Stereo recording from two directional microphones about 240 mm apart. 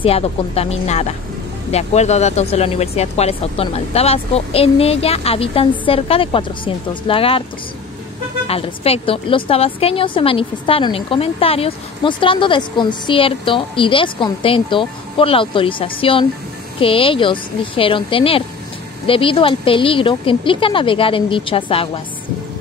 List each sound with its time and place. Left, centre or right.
0.0 s a woman's voice: left
8.5 s a woman's voice: left